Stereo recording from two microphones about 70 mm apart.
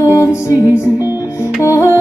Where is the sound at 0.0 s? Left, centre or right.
Left.